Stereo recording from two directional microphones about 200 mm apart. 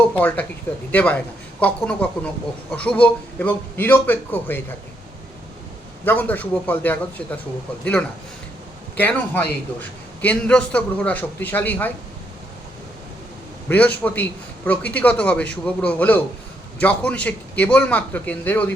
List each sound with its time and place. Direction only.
0.1 s speech: 5° left (ahead or behind)
6.1 s speech: 10° left (ahead or behind)
9.0 s speech: 10° left (ahead or behind)
13.7 s a man's voice: 10° left (ahead or behind)